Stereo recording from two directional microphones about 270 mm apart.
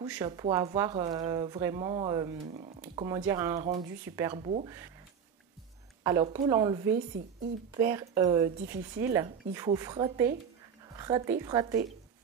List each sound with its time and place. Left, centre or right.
0.0 s speech: centre
3.0 s speech: centre
3.5 s speech: right
3.8 s speech: centre
6.0 s speech: centre